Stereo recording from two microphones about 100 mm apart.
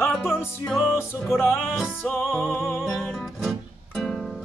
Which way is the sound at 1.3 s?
25° left (ahead or behind).